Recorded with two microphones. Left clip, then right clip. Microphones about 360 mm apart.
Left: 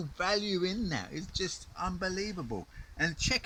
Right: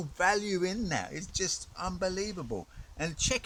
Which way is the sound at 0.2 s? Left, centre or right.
Centre.